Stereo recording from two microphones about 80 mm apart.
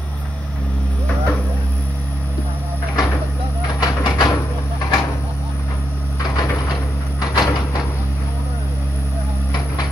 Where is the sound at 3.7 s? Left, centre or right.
Left.